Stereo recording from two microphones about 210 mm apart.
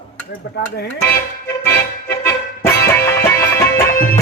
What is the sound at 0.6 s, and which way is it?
Dishes, 50° left (ahead or behind).